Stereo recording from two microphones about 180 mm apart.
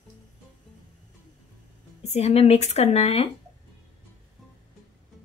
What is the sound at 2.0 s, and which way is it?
A woman's voice, 35° left (ahead or behind).